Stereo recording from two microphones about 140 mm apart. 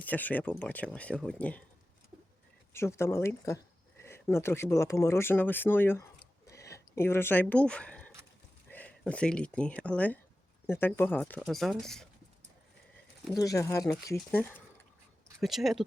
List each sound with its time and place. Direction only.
0.0 s speech: 10° left (ahead or behind)
2.7 s speech: 20° left (ahead or behind)
6.5 s a sound: 20° left (ahead or behind)
8.7 s speech: 10° left (ahead or behind)
11.3 s speech: centre (ahead or behind)
13.3 s speech: 25° left (ahead or behind)
14.3 s speech: 10° left (ahead or behind)
15.4 s speech: centre (ahead or behind)